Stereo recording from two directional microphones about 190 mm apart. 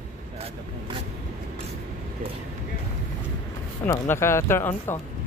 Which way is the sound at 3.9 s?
15° left (ahead or behind).